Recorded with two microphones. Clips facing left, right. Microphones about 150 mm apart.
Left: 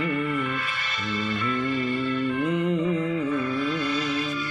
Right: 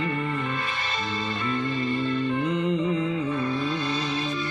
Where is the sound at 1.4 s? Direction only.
30° right (ahead or behind).